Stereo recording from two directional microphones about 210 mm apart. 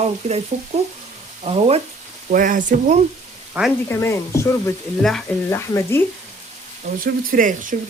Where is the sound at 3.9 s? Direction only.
15° left (ahead or behind).